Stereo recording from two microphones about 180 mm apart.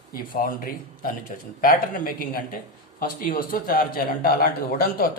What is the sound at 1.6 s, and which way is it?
A man's voice, 55° left (ahead or behind).